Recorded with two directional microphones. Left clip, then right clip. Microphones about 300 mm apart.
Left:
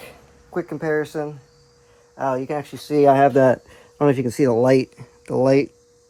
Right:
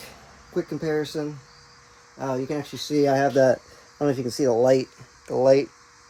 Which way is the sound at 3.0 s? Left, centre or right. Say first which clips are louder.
Left 5 dB; left.